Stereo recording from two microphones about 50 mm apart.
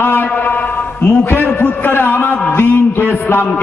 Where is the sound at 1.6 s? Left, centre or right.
Left.